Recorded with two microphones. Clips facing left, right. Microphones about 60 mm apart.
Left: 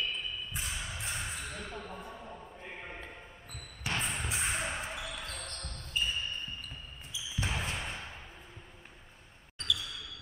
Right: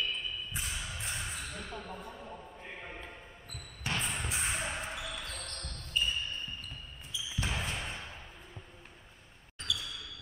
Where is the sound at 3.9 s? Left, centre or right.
Centre.